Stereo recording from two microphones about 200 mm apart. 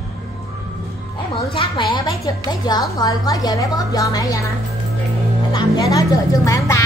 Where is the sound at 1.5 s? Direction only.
25° left (ahead or behind).